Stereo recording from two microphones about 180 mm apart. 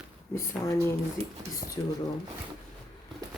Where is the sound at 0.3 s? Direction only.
15° left (ahead or behind).